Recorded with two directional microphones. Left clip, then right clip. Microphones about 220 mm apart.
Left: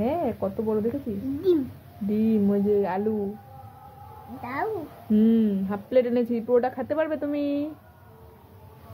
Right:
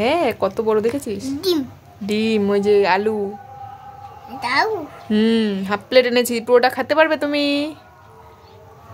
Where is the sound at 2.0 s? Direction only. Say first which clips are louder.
Right 6 dB; 30° right (ahead or behind).